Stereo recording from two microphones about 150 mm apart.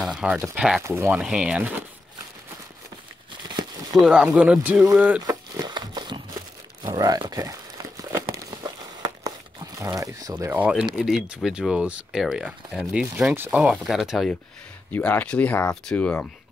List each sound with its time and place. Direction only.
0.0 s speech: 5° right (ahead or behind)
0.8 s speech: 20° right (ahead or behind)
1.1 s speech: 5° right (ahead or behind)
4.0 s speech: 5° right (ahead or behind)
5.2 s crumpling: 25° right (ahead or behind)
11.1 s speech: 5° right (ahead or behind)
14.9 s speech: 10° left (ahead or behind)